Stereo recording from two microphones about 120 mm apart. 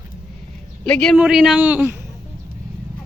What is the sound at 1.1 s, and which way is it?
Speech, 10° right (ahead or behind).